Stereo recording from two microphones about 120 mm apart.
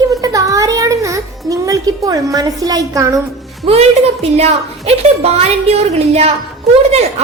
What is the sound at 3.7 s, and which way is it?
A woman's voice, 60° right (ahead or behind).